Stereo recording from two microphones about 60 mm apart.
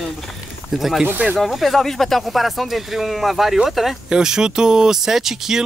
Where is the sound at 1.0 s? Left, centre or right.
Centre.